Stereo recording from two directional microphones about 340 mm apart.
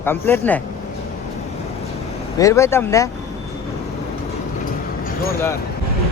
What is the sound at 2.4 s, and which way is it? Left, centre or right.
Speech, centre.